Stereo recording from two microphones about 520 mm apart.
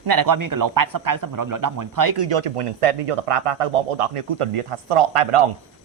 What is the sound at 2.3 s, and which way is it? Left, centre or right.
Speech, right.